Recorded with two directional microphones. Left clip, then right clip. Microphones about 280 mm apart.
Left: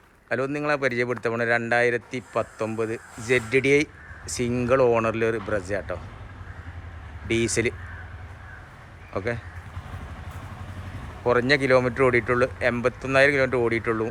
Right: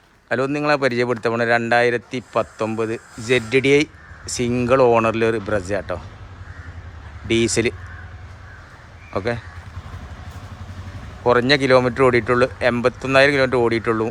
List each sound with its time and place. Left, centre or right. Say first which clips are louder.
0.3 s speech: right 6 dB; centre
7.3 s speech: right 5 dB; centre
9.1 s speech: right 5 dB; centre
11.2 s speech: right 5 dB; centre